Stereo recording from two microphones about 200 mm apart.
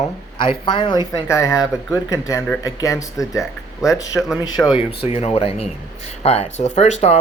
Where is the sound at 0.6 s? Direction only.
25° left (ahead or behind).